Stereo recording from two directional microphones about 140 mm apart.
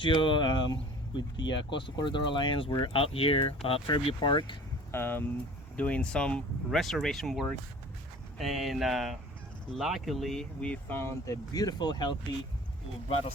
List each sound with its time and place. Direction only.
0.0 s speech: 35° left (ahead or behind)
4.9 s speech: 15° left (ahead or behind); by 12.1 s 30° left (ahead or behind)